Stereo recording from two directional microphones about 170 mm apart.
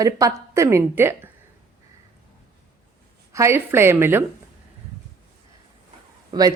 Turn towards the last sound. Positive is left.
turn(degrees=-20)  # may be behind; listen again after turning